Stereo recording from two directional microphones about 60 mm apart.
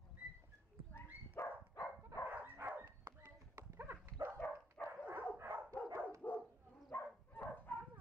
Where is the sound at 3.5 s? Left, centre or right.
Right.